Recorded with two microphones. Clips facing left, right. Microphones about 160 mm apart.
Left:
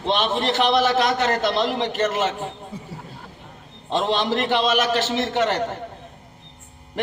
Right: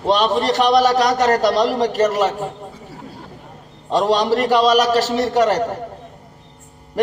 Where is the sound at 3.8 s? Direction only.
40° right (ahead or behind).